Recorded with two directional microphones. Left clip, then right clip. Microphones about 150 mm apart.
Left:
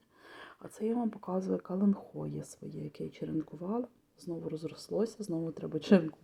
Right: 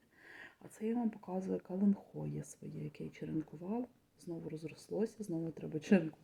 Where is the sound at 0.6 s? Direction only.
5° left (ahead or behind).